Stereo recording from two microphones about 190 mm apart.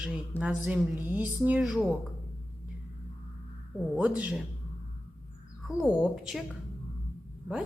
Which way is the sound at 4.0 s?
5° right (ahead or behind).